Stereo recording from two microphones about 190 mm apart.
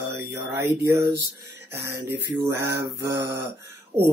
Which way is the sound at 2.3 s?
15° right (ahead or behind).